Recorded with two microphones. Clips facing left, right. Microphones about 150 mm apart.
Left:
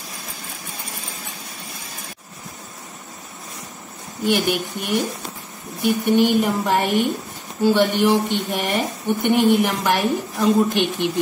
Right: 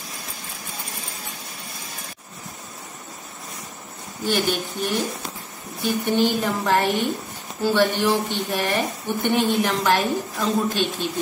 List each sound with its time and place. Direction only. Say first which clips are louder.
4.2 s a woman's voice: left 3 dB; 15° left (ahead or behind)